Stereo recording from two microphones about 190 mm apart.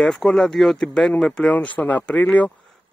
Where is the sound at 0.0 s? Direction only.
5° left (ahead or behind).